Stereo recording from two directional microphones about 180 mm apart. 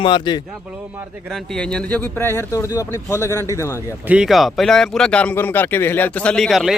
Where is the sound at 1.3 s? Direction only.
5° left (ahead or behind).